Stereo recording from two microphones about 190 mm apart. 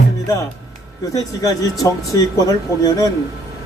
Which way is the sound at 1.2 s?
20° left (ahead or behind).